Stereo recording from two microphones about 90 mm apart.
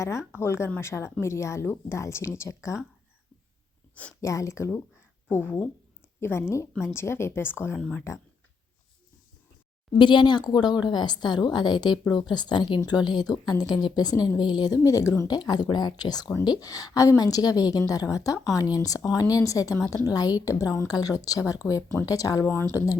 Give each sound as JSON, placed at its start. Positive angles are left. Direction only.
{"t": 0.0, "sound": "a woman's voice", "side_deg": 35}
{"t": 4.2, "sound": "speech", "side_deg": 35}
{"t": 5.3, "sound": "a woman's voice", "side_deg": 20}
{"t": 10.0, "sound": "a woman's voice", "side_deg": 60}
{"t": 15.3, "sound": "a woman's voice", "side_deg": 50}